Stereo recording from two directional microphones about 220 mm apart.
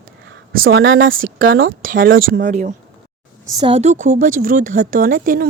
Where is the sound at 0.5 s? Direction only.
65° right (ahead or behind).